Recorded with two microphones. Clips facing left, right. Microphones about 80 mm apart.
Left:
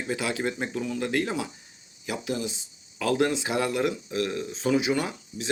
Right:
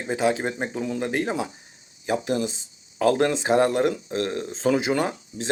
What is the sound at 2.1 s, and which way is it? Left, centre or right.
Speech, right.